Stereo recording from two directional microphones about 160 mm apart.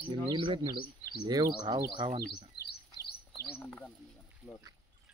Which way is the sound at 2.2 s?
85° left.